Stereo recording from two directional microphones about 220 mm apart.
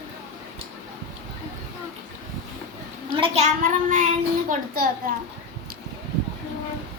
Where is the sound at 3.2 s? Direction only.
30° right (ahead or behind).